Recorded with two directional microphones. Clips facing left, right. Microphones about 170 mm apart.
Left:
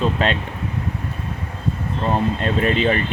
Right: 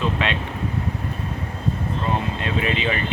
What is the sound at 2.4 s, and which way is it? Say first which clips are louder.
Speech: left 5 dB; 45° left (ahead or behind).